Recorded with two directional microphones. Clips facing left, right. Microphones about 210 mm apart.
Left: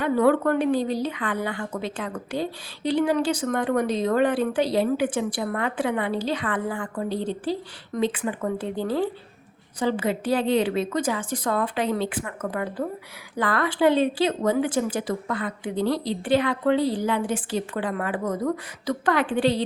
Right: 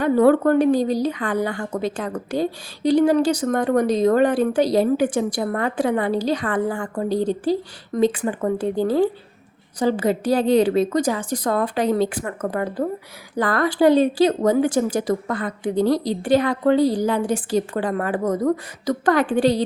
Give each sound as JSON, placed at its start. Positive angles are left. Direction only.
{"t": 0.0, "sound": "a woman's voice", "side_deg": -40}